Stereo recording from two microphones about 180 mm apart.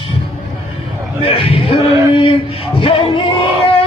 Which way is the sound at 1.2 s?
30° left (ahead or behind).